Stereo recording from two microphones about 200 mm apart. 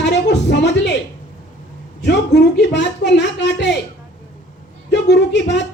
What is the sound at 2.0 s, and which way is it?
Speech, 60° left (ahead or behind).